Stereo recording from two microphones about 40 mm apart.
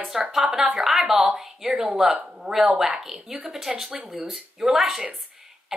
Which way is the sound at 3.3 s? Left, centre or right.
Centre.